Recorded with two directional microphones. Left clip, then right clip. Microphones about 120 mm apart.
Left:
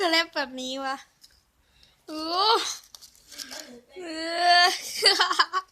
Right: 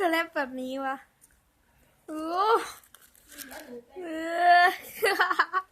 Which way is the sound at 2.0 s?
15° right (ahead or behind).